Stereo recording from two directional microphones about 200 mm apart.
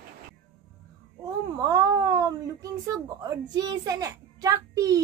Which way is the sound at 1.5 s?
20° right (ahead or behind).